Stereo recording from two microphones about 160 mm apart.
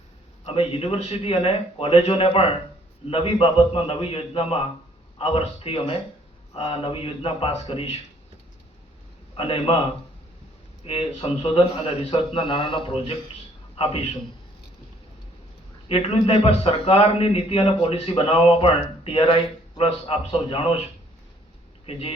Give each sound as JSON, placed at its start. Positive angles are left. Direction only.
{"t": 0.4, "sound": "speech", "side_deg": 35}
{"t": 9.3, "sound": "a man's voice", "side_deg": 35}
{"t": 10.8, "sound": "a man's voice", "side_deg": 35}
{"t": 15.9, "sound": "speech", "side_deg": 35}